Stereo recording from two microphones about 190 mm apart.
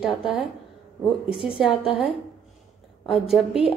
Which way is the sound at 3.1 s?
Centre (ahead or behind).